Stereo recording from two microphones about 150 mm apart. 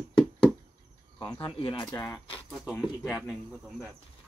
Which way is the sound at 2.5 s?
Centre (ahead or behind).